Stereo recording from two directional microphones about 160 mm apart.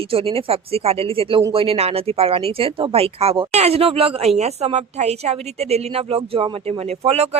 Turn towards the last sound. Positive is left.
turn(degrees=-40)  # may be behind; listen again after turning